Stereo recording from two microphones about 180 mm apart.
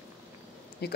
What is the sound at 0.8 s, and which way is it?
Speech, 60° left (ahead or behind).